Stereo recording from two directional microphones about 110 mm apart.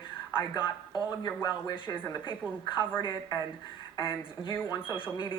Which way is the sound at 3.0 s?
35° left (ahead or behind).